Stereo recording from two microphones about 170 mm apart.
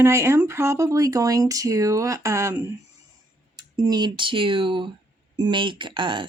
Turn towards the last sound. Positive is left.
turn(degrees=-30)  # may be behind; listen again after turning